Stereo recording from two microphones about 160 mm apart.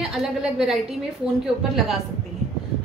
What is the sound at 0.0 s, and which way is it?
Speech, centre (ahead or behind).